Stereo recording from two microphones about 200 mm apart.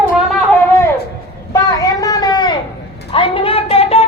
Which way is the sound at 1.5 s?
15° left (ahead or behind).